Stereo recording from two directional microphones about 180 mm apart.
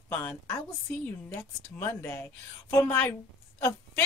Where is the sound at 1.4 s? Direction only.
15° left (ahead or behind).